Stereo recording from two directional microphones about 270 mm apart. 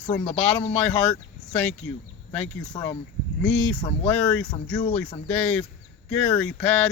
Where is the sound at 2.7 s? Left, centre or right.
Centre.